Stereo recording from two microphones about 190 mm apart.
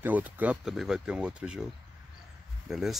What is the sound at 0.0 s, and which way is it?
Speech, 10° right (ahead or behind).